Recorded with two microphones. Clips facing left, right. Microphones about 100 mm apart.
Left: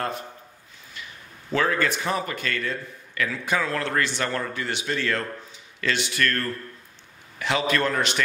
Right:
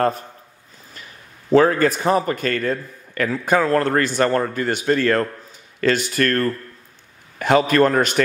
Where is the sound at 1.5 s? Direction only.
40° right (ahead or behind).